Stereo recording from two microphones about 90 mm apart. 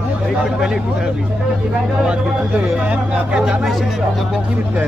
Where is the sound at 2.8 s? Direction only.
15° right (ahead or behind).